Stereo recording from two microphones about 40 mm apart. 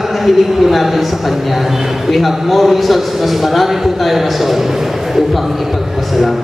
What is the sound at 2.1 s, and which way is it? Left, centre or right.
A man's voice, centre.